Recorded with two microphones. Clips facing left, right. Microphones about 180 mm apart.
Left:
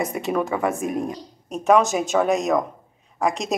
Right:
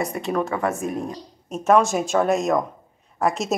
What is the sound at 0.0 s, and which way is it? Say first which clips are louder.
Speech: left 1 dB; centre (ahead or behind).